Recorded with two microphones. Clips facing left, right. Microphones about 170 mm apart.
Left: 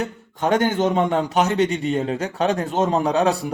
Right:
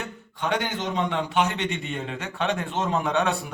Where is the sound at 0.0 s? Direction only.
45° left (ahead or behind).